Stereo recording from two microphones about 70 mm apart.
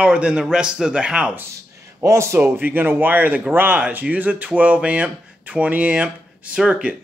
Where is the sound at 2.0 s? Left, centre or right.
Right.